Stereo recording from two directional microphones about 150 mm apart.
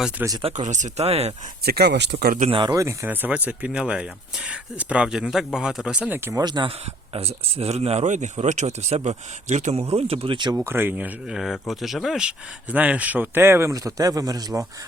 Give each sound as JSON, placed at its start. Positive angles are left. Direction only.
{"t": 0.4, "sound": "speech", "side_deg": -50}
{"t": 1.6, "sound": "speech", "side_deg": -90}
{"t": 2.5, "sound": "speech", "side_deg": -30}
{"t": 6.4, "sound": "speech", "side_deg": -30}
{"t": 7.1, "sound": "speech", "side_deg": -40}
{"t": 10.7, "sound": "speech", "side_deg": -15}